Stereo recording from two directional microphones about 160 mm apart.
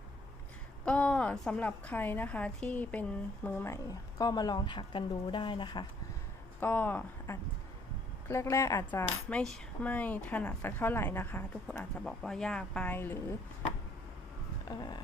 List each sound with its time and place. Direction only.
0.9 s a woman's voice: 5° left (ahead or behind); by 5.8 s 30° left (ahead or behind)
6.6 s a woman's voice: 10° left (ahead or behind)
14.6 s a sound: 25° left (ahead or behind)